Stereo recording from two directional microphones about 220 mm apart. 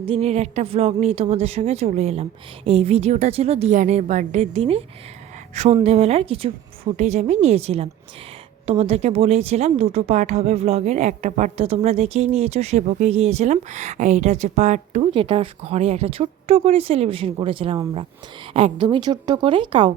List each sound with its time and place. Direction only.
0.0 s speech: 25° right (ahead or behind)